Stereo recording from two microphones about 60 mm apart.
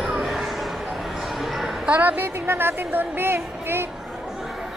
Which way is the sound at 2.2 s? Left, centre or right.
Right.